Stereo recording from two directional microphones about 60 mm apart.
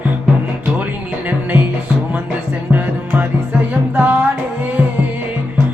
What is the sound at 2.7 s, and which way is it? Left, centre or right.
Music, right.